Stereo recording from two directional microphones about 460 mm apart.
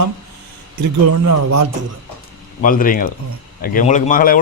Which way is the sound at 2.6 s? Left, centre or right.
Centre.